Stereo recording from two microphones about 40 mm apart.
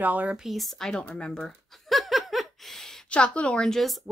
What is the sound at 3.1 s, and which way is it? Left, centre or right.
Speech, left.